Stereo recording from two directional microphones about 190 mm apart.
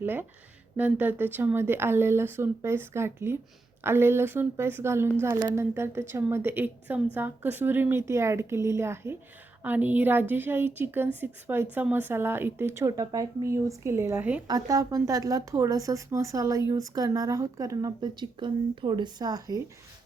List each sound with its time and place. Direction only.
0.0 s speech: 10° right (ahead or behind)